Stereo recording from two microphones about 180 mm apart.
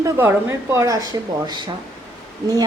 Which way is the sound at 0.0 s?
15° right (ahead or behind).